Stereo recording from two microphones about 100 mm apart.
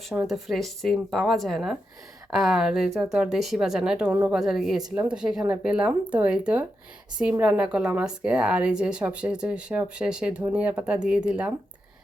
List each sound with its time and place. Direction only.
0.3 s speech: centre (ahead or behind)
4.1 s speech: 20° right (ahead or behind)
4.4 s a woman's voice: 5° right (ahead or behind)